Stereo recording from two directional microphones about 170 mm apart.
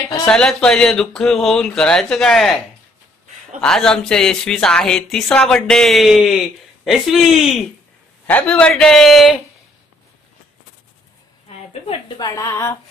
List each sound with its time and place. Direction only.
0.3 s speech: 5° left (ahead or behind)
3.6 s speech: 5° left (ahead or behind)
12.2 s a woman's voice: 20° left (ahead or behind)